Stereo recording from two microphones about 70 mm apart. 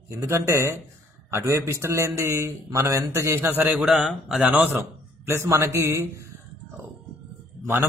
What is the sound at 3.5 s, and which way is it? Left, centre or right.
Speech, right.